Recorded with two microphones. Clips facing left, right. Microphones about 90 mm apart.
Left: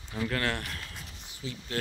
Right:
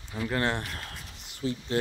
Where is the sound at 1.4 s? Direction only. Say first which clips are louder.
Right 9 dB; 45° right (ahead or behind).